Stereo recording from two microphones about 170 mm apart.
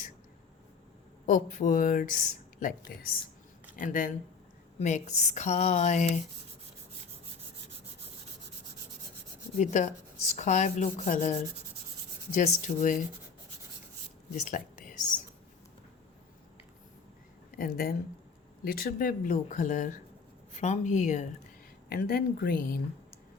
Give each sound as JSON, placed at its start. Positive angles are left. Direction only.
{"t": 1.3, "sound": "speech", "side_deg": 50}
{"t": 9.6, "sound": "speech", "side_deg": 45}
{"t": 14.3, "sound": "a sound", "side_deg": 50}
{"t": 17.6, "sound": "speech", "side_deg": 65}
{"t": 21.8, "sound": "speech", "side_deg": 65}